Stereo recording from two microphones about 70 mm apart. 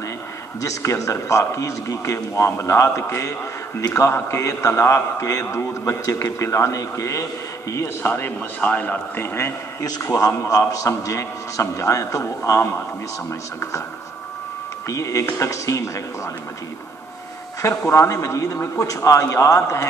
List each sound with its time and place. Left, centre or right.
0.6 s a man's voice: left
8.5 s a man's voice: centre
9.1 s a man's voice: left
9.8 s a man's voice: left
10.0 s a man's voice: left
14.9 s a man's voice: left
17.6 s a man's voice: left